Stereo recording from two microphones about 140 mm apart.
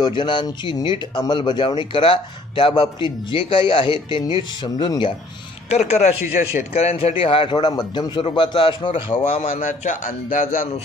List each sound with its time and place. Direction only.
0.0 s speech: 35° left (ahead or behind)
5.7 s speech: 55° left (ahead or behind); by 9.0 s 35° left (ahead or behind)
9.1 s speech: 50° left (ahead or behind)
9.6 s a man's voice: 65° left (ahead or behind)